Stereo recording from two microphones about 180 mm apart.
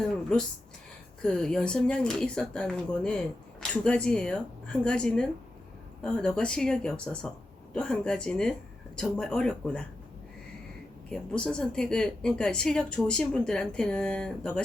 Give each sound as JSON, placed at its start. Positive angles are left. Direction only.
{"t": 0.1, "sound": "a woman's voice", "side_deg": 5}
{"t": 11.1, "sound": "a woman's voice", "side_deg": 5}